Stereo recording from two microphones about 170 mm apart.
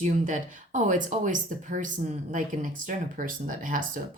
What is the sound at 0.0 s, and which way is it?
Speech, 45° right (ahead or behind).